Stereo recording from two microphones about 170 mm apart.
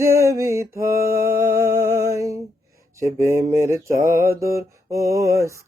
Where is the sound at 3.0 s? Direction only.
15° right (ahead or behind).